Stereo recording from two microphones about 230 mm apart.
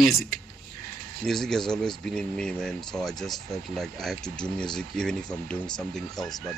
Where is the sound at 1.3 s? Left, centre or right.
Centre.